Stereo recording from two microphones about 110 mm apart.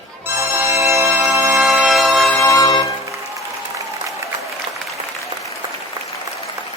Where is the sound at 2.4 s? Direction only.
30° left (ahead or behind).